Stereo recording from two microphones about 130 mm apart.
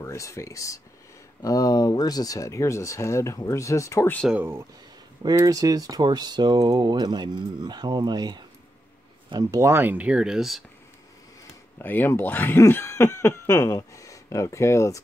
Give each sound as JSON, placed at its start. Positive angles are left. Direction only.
{"t": 0.0, "sound": "speech", "side_deg": 25}
{"t": 4.3, "sound": "speech", "side_deg": -15}
{"t": 5.3, "sound": "speech", "side_deg": -25}
{"t": 11.8, "sound": "speech", "side_deg": 15}